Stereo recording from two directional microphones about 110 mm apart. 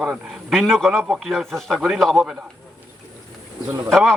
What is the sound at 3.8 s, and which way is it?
Speech, centre (ahead or behind).